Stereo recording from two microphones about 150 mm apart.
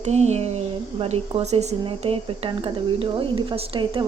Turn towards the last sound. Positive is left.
turn(degrees=-35)  # may be behind; listen again after turning